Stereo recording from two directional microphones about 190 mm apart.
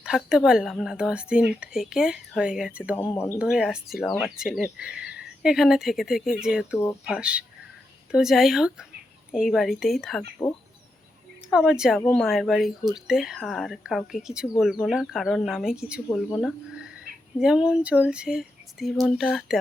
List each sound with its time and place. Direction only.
0.0 s speech: 5° right (ahead or behind)
3.0 s speech: 20° left (ahead or behind)
3.3 s speech: 5° right (ahead or behind)
11.7 s speech: 5° right (ahead or behind)